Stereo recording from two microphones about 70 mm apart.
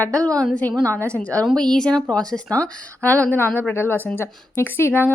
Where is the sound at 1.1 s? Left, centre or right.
Centre.